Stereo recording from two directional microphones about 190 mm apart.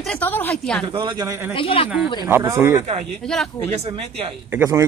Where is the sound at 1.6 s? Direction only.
30° left (ahead or behind).